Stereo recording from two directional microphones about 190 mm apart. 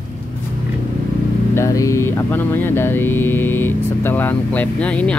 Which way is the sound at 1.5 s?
15° left (ahead or behind).